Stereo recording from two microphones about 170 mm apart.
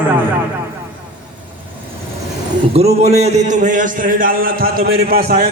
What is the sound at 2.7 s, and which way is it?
A man's voice, 40° right (ahead or behind).